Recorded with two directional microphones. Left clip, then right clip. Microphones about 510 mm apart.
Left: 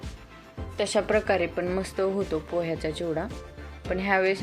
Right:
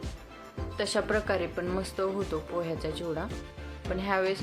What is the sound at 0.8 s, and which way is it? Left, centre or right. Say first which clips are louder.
Speech: left 4 dB; centre.